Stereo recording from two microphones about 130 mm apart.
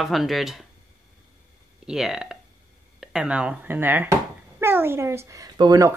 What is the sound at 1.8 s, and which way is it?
Speech, 5° right (ahead or behind).